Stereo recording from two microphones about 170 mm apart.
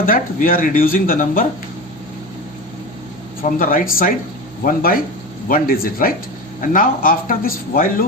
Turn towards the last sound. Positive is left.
turn(degrees=55)  # may be behind; listen again after turning